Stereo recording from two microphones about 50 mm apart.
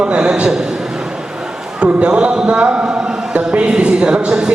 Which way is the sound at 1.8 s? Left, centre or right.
Right.